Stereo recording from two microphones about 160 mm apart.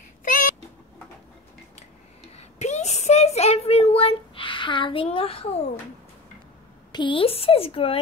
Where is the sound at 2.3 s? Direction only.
45° left (ahead or behind).